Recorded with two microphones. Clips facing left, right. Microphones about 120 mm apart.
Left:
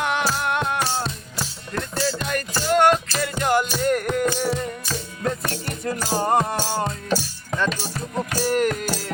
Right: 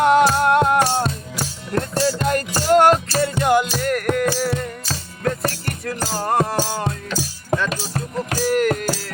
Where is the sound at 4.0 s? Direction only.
70° right (ahead or behind).